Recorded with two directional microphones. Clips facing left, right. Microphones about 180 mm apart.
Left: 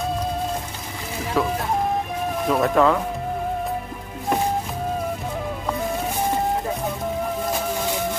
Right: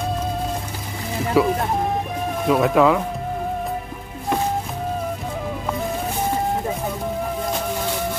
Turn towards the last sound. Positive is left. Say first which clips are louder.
# even
turn(degrees=0)  # may be behind; listen again after turning